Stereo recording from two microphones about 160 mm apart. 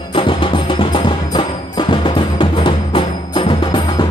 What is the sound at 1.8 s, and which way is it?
Music, 30° left (ahead or behind).